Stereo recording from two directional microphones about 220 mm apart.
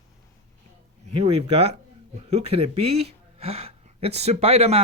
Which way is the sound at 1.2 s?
30° right (ahead or behind).